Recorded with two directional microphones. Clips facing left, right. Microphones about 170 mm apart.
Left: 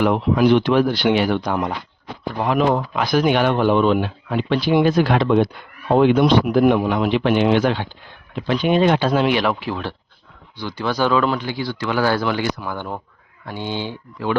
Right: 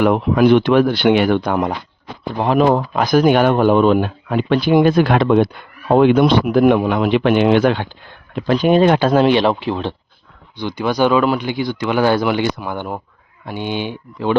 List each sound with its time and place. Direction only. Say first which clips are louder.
0.0 s speech: right 3 dB; 55° right (ahead or behind)
2.4 s speech: right 4 dB; 35° right (ahead or behind); by 7.9 s 55° right (ahead or behind)
8.4 s speech: right 4 dB; 40° right (ahead or behind)
9.2 s speech: right 5 dB; 30° right (ahead or behind)